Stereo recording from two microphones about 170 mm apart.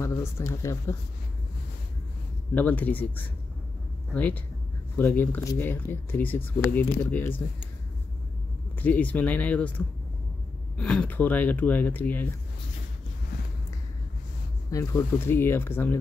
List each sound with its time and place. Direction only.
0.0 s speech: 15° left (ahead or behind)
2.5 s speech: 10° left (ahead or behind)
8.7 s speech: 10° left (ahead or behind)
14.7 s speech: 20° left (ahead or behind)